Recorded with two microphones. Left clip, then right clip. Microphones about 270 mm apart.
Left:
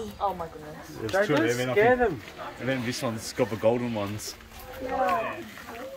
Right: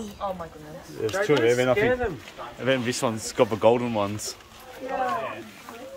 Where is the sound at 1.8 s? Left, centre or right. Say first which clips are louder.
Left 2 dB; left.